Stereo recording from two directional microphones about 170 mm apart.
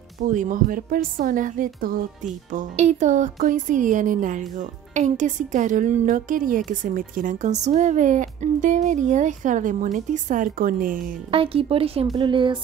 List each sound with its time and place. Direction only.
0.2 s a woman's voice: 50° right (ahead or behind)
11.3 s speech: 35° right (ahead or behind)